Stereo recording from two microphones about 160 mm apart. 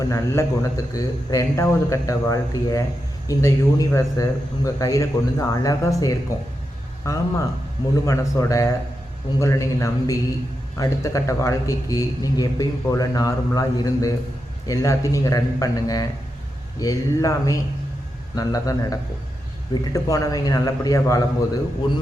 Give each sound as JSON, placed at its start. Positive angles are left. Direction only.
{"t": 0.0, "sound": "a man's voice", "side_deg": 20}